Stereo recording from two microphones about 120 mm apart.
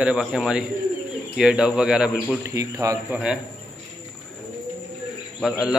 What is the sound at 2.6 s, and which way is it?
Speech, 25° right (ahead or behind).